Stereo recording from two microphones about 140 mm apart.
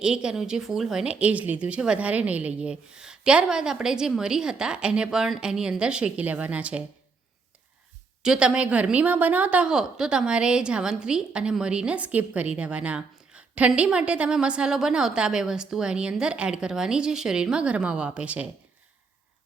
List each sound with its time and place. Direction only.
0.0 s a woman's voice: 5° right (ahead or behind)
8.2 s a woman's voice: 5° right (ahead or behind)